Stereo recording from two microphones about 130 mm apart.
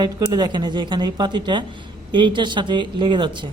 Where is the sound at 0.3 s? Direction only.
35° right (ahead or behind).